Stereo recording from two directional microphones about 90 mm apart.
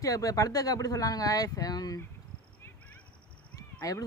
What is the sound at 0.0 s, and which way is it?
Speech, 40° left (ahead or behind).